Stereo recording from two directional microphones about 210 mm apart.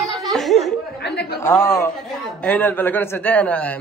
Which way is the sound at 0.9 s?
50° left (ahead or behind).